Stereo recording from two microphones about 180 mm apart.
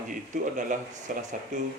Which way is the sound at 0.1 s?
45° right (ahead or behind).